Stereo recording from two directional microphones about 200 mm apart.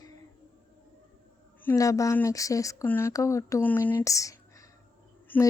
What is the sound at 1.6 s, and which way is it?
Speech, 15° left (ahead or behind).